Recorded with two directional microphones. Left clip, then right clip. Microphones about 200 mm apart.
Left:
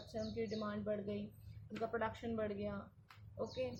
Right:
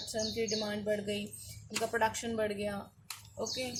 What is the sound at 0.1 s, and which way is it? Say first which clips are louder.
Speech: right 8 dB; 25° right (ahead or behind).